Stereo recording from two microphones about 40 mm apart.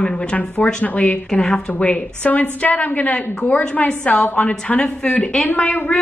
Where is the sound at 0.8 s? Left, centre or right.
Left.